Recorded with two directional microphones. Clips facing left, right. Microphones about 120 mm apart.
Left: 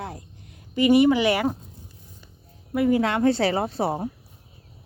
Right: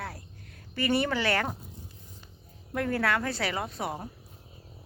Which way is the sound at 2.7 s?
10° left (ahead or behind).